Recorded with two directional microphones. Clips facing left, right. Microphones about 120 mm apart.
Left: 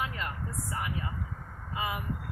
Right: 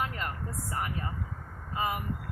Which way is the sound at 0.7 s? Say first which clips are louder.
Right 2 dB; 45° right (ahead or behind).